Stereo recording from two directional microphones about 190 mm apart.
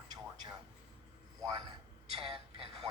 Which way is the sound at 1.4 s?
20° right (ahead or behind).